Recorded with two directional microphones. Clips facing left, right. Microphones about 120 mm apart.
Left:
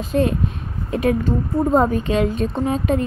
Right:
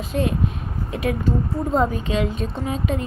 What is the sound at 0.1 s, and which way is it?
Speech, 40° left (ahead or behind).